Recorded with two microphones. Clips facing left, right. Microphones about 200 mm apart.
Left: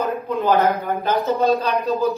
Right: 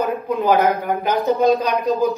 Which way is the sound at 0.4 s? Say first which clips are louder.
Right 1 dB; 15° right (ahead or behind).